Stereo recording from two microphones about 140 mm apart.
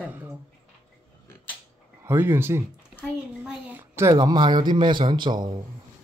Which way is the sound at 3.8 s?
20° right (ahead or behind).